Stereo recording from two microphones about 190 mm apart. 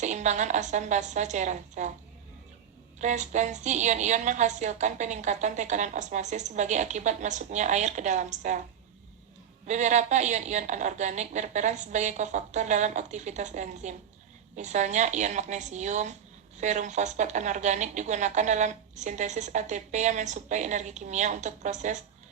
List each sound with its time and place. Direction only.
0.0 s a woman's voice: 40° right (ahead or behind)
3.0 s a woman's voice: 40° right (ahead or behind)
9.6 s a woman's voice: 40° right (ahead or behind)